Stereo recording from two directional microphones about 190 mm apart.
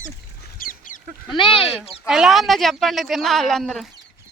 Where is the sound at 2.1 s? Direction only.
Centre (ahead or behind).